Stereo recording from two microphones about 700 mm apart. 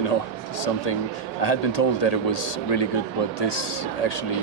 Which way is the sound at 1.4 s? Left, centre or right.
Left.